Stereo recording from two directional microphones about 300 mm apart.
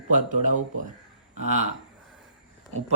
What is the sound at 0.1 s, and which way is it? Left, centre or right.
Speech, right.